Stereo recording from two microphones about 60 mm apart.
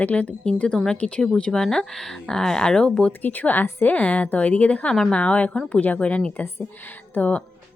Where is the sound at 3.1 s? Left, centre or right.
Left.